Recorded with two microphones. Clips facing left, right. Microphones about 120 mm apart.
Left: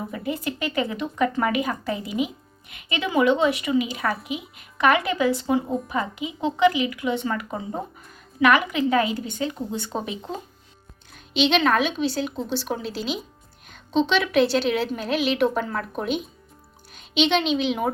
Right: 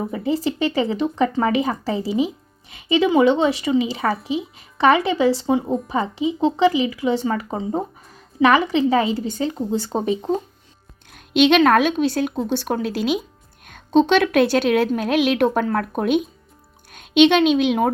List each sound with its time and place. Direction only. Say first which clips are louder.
0.0 s speech: right 6 dB; 25° right (ahead or behind)
11.1 s a woman's voice: right 6 dB; 55° right (ahead or behind)